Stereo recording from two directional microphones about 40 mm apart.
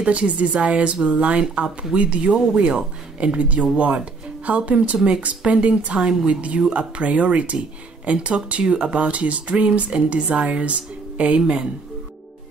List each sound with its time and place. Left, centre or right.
0.0 s speech: right